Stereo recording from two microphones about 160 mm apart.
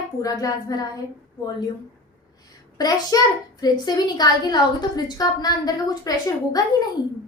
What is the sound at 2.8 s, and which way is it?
A woman's voice, 25° left (ahead or behind).